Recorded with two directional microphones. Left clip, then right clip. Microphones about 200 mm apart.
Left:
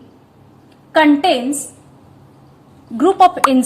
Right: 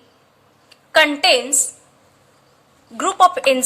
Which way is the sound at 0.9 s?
30° right (ahead or behind).